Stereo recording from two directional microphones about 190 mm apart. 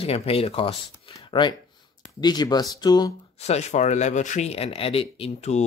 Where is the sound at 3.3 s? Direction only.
35° left (ahead or behind).